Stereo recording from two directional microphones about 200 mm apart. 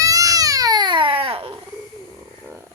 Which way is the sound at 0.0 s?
15° right (ahead or behind).